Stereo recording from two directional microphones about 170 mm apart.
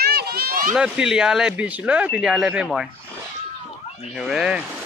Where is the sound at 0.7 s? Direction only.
5° right (ahead or behind).